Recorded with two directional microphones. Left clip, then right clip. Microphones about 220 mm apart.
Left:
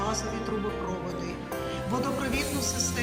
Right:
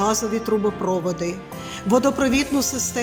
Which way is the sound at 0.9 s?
50° right (ahead or behind).